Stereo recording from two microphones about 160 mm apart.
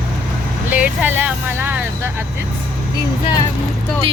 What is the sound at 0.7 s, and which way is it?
Speech, 10° right (ahead or behind).